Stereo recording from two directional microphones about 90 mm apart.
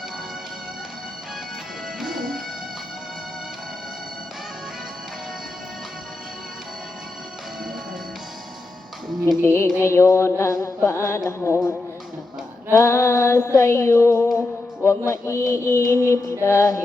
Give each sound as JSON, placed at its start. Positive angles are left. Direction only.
{"t": 2.0, "sound": "music", "side_deg": 0}
{"t": 9.4, "sound": "female singing", "side_deg": 30}